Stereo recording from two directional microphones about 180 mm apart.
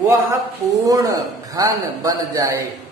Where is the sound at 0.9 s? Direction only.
20° right (ahead or behind).